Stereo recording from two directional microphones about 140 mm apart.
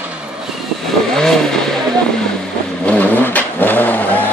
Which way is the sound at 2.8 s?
10° left (ahead or behind).